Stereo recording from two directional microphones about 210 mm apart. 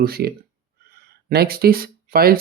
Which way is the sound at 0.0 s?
50° right (ahead or behind).